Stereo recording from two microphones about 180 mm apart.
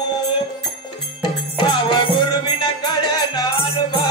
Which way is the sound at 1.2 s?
25° left (ahead or behind).